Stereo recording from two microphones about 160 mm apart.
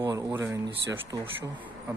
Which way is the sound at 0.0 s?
20° right (ahead or behind).